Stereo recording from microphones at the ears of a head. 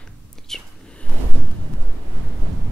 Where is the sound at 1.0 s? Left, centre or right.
Right.